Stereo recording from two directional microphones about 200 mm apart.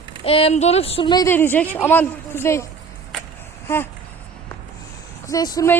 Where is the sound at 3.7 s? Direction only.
10° left (ahead or behind).